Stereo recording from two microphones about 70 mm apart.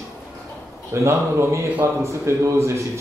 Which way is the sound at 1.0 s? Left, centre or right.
Right.